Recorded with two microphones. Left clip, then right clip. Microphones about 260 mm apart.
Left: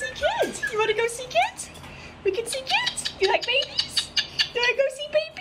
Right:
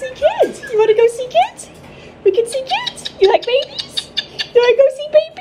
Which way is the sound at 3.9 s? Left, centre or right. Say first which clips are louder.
Right 3 dB; centre.